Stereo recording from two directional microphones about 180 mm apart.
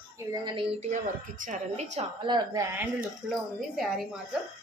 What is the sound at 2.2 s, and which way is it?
Speech, 25° right (ahead or behind).